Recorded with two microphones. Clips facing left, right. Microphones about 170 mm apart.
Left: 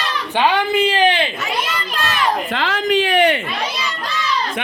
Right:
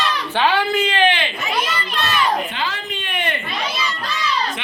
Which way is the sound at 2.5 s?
90° left.